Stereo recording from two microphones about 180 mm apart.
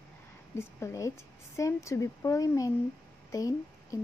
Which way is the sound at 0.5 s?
15° left (ahead or behind).